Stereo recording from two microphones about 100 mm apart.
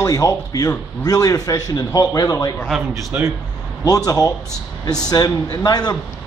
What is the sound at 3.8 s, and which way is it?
A man's voice, 35° left (ahead or behind).